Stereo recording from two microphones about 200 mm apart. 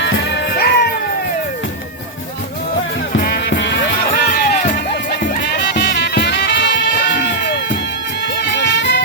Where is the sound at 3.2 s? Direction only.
50° left (ahead or behind).